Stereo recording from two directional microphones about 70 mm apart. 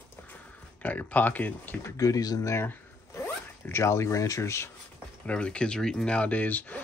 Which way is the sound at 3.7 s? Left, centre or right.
Left.